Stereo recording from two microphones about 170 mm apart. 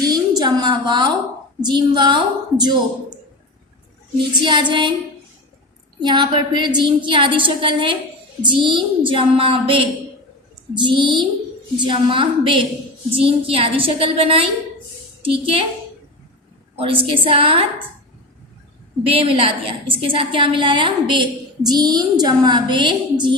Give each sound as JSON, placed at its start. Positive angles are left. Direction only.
{"t": 0.0, "sound": "a sound", "side_deg": -20}
{"t": 1.6, "sound": "a woman's voice", "side_deg": -25}
{"t": 4.4, "sound": "a woman's voice", "side_deg": -25}
{"t": 6.1, "sound": "a woman's voice", "side_deg": -25}
{"t": 16.7, "sound": "a woman's voice", "side_deg": -35}
{"t": 19.0, "sound": "a woman's voice", "side_deg": -35}